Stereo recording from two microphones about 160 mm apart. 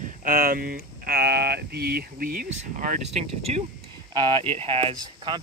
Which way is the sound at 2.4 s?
50° right (ahead or behind).